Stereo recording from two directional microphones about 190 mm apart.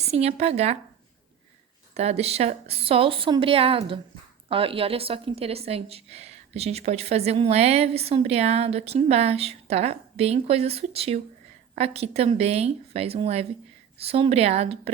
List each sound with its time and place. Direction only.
0.1 s a woman's voice: 35° right (ahead or behind)
2.0 s a woman's voice: 35° right (ahead or behind)